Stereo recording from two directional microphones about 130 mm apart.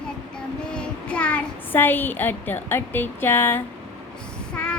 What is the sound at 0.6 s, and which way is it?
A child's voice, 5° left (ahead or behind).